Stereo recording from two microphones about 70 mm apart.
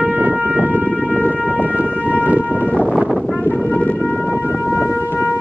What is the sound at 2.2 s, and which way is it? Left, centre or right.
Shofar, right.